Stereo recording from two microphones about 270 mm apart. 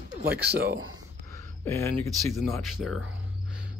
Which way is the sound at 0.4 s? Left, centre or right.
Right.